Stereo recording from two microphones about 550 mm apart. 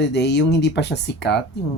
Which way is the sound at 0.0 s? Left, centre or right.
Centre.